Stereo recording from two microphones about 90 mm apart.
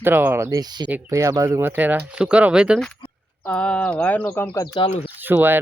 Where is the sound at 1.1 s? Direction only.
35° right (ahead or behind).